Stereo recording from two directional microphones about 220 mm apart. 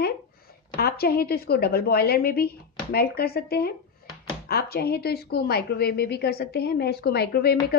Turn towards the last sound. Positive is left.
turn(degrees=45)  # may be behind; listen again after turning